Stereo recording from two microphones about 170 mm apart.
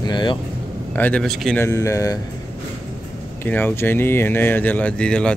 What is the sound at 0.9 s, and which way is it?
Speech, 10° left (ahead or behind).